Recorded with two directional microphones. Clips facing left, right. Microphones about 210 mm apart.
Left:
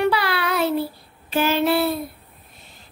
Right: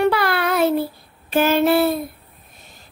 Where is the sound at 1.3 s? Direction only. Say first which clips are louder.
Right 3 dB; 50° right (ahead or behind).